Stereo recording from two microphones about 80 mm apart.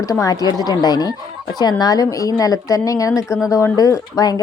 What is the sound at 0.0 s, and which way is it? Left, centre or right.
Speech, left.